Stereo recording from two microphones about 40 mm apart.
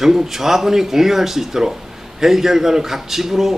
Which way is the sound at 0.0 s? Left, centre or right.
Centre.